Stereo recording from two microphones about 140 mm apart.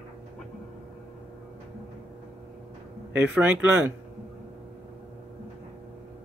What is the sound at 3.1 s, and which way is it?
Speech, 10° right (ahead or behind).